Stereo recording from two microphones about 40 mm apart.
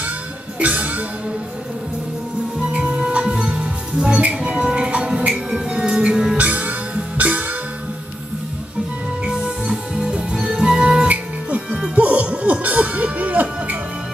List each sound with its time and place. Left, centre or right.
0.6 s music: right
2.7 s music: right
5.3 s music: centre
6.3 s music: right
9.7 s music: centre
11.9 s music: right